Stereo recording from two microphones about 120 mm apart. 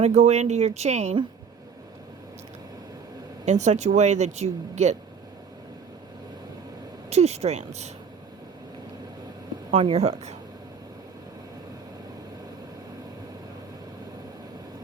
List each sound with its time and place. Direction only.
0.0 s speech: 70° right (ahead or behind)
3.4 s speech: 75° right (ahead or behind)
7.1 s speech: 65° right (ahead or behind)
9.8 s speech: 60° right (ahead or behind)